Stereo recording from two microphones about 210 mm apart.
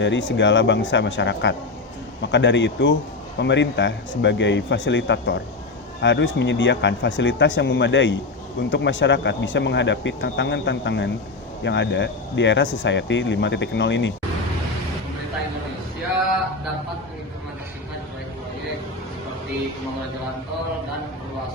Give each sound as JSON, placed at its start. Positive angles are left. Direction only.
{"t": 0.0, "sound": "speech", "side_deg": 60}